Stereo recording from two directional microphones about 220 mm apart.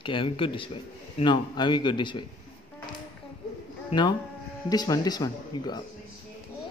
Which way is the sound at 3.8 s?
20° left (ahead or behind).